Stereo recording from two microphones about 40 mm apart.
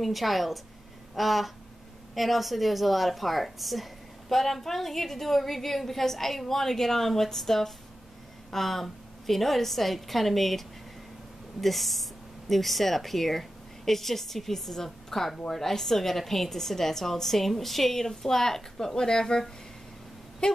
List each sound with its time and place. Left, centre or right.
0.0 s speech: centre
11.6 s speech: centre
20.4 s a sound: left